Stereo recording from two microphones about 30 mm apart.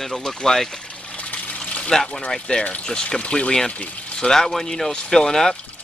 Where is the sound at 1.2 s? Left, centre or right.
Left.